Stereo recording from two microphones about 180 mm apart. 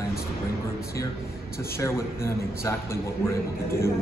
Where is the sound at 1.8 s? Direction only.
15° left (ahead or behind).